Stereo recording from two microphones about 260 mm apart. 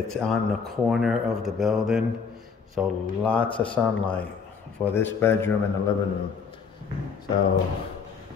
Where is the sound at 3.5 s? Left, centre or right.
Centre.